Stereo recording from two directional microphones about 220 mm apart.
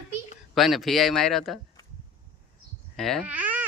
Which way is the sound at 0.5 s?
Centre (ahead or behind).